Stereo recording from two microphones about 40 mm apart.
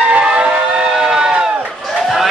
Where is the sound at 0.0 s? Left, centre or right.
Right.